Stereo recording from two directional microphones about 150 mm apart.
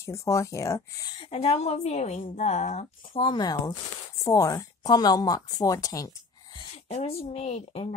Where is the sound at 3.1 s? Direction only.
30° left (ahead or behind).